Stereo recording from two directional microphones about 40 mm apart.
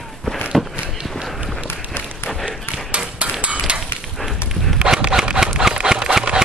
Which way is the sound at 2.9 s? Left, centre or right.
Right.